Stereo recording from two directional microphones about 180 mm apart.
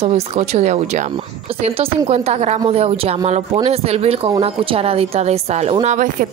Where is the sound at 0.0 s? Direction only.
35° right (ahead or behind).